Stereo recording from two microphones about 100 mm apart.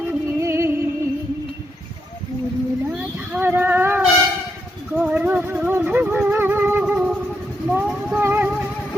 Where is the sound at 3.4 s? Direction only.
20° right (ahead or behind).